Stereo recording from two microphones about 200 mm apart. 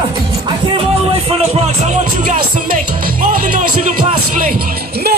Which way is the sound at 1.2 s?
30° right (ahead or behind).